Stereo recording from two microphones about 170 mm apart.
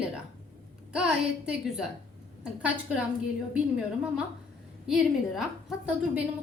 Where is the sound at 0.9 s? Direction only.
5° right (ahead or behind).